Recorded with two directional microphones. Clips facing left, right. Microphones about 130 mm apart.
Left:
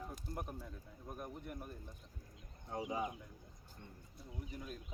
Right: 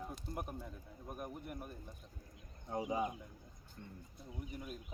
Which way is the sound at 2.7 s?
20° right (ahead or behind).